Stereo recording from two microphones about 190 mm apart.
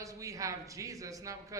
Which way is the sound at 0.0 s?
15° right (ahead or behind).